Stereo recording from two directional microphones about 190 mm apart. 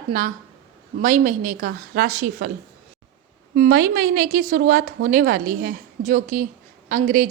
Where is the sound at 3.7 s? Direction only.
55° right (ahead or behind).